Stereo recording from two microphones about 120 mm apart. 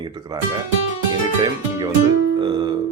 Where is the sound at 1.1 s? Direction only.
35° right (ahead or behind).